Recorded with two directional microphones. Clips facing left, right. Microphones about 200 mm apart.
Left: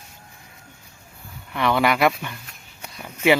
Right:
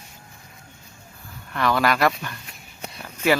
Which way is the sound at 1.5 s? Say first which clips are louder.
Left 1 dB; 15° left (ahead or behind).